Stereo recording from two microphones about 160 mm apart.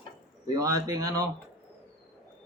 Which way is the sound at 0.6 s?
20° right (ahead or behind).